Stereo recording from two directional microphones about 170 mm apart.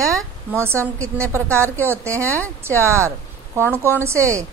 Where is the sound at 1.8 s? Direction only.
15° right (ahead or behind).